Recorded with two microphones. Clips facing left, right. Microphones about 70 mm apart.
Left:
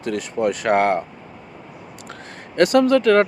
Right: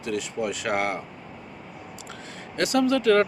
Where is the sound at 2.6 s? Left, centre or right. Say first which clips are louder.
Left 7 dB; left.